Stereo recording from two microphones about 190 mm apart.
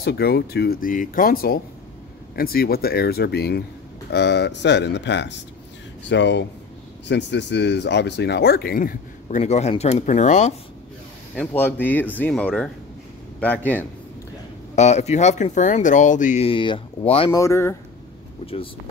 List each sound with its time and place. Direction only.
0.0 s speech: 55° left (ahead or behind)
9.4 s speech: 35° left (ahead or behind)
11.3 s speech: 10° left (ahead or behind)
14.8 s speech: 35° left (ahead or behind)
17.3 s speech: 15° left (ahead or behind)
18.4 s speech: 30° left (ahead or behind)